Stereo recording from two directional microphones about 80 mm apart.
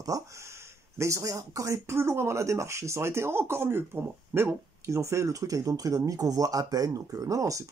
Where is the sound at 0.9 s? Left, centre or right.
Right.